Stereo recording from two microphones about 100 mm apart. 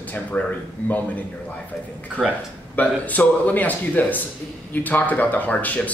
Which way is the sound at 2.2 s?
Centre (ahead or behind).